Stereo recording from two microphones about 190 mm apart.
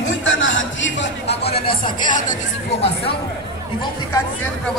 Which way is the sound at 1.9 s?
45° left (ahead or behind).